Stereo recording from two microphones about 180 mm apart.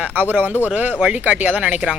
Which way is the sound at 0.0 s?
10° right (ahead or behind).